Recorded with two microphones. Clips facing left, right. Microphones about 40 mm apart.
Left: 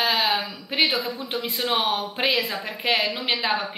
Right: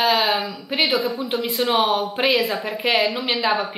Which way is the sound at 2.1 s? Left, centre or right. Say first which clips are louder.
Right 4 dB; centre.